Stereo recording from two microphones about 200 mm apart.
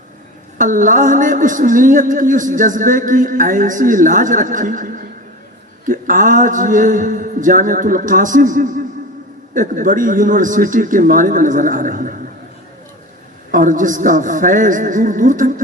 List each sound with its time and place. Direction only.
0.6 s a man's voice: 40° right (ahead or behind)
13.5 s a man's voice: 40° right (ahead or behind)